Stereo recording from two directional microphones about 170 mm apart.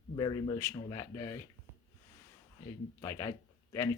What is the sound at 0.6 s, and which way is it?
Speech, 15° left (ahead or behind).